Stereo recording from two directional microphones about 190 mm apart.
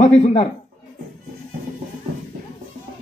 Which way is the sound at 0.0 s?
35° left (ahead or behind).